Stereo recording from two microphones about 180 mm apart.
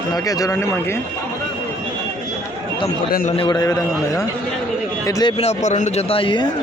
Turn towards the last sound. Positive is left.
turn(degrees=25)  # may be behind; listen again after turning